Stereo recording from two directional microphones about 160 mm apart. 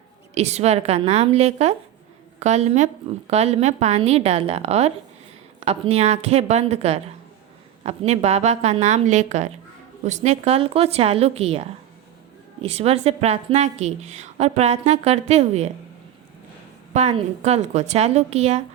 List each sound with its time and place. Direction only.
0.3 s a woman's voice: 40° right (ahead or behind)
12.6 s a woman's voice: 40° right (ahead or behind)
16.9 s a woman's voice: 45° right (ahead or behind)